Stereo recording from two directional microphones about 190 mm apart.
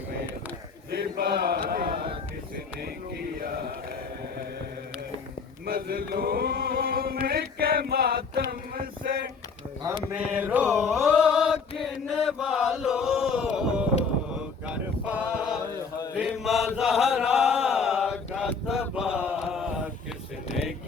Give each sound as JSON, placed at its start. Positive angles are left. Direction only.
{"t": 0.9, "sound": "mantra", "side_deg": -55}
{"t": 5.6, "sound": "chant", "side_deg": -50}
{"t": 10.2, "sound": "mantra", "side_deg": -10}
{"t": 11.8, "sound": "chant", "side_deg": 0}
{"t": 14.7, "sound": "a sound", "side_deg": -5}
{"t": 16.1, "sound": "chant", "side_deg": -5}